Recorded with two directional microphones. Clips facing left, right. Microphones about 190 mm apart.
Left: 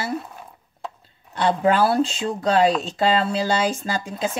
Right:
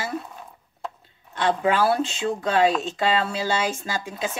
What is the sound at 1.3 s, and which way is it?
Speech, 35° left (ahead or behind).